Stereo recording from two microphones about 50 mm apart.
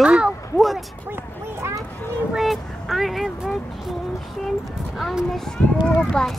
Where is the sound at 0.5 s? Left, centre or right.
Centre.